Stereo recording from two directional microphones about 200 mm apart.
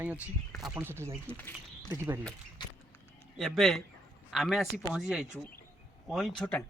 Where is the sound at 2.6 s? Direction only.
20° left (ahead or behind).